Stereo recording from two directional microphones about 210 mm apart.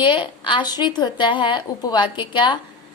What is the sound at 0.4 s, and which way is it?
A woman's voice, 20° left (ahead or behind).